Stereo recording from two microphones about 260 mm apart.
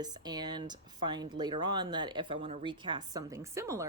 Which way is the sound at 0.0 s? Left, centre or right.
Centre.